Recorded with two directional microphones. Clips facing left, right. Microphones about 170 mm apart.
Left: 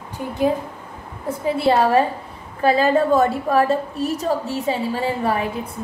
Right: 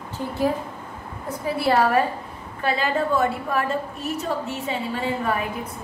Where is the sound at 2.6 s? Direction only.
40° left (ahead or behind).